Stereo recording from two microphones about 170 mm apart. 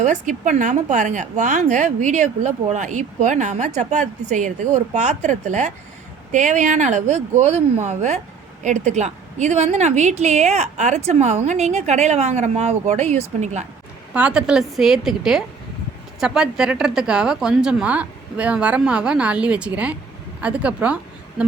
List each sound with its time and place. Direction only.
0.0 s a woman's voice: 45° right (ahead or behind)
14.1 s a woman's voice: 5° right (ahead or behind)